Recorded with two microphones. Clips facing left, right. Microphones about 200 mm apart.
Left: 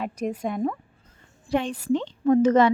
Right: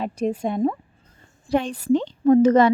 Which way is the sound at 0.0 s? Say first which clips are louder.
Right 4 dB; 30° right (ahead or behind).